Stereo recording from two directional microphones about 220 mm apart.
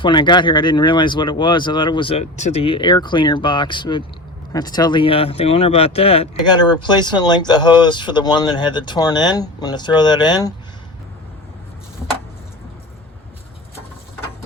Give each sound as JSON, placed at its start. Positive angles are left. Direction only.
{"t": 0.0, "sound": "speech", "side_deg": 20}